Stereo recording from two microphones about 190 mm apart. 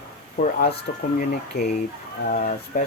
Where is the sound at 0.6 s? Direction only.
50° left (ahead or behind).